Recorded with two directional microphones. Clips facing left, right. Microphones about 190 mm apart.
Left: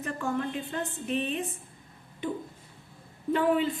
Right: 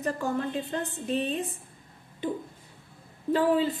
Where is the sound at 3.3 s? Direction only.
35° right (ahead or behind).